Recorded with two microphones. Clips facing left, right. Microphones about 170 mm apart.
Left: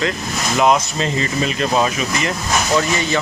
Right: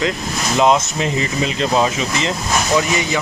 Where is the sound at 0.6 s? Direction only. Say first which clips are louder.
Right 1 dB; 20° right (ahead or behind).